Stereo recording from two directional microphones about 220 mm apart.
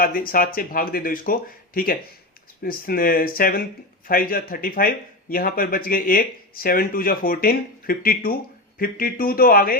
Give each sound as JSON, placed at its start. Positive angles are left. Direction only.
{"t": 0.0, "sound": "speech", "side_deg": 40}